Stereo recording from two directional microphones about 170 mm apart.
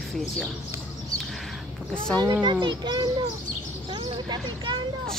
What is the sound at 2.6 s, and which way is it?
Speech, 25° right (ahead or behind).